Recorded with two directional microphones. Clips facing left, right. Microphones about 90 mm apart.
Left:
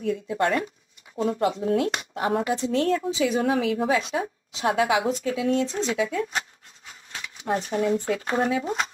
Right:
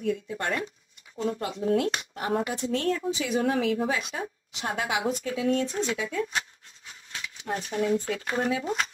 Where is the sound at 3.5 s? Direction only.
65° left (ahead or behind).